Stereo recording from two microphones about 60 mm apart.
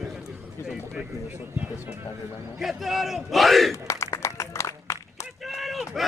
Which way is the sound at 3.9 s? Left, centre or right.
Left.